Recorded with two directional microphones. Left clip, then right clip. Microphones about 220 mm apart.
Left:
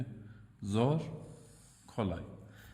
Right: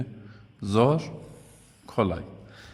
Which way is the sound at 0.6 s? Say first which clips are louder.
Right 11 dB; 20° right (ahead or behind).